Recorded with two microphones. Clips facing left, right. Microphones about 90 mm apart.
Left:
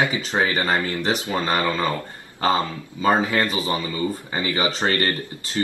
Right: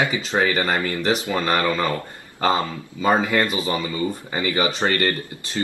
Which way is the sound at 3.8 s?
30° right (ahead or behind).